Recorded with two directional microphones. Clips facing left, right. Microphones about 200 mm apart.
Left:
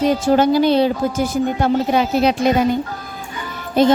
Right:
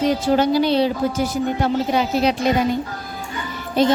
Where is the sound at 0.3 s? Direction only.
50° left (ahead or behind).